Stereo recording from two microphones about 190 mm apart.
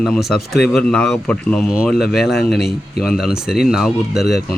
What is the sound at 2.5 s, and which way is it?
Speech, 55° left (ahead or behind).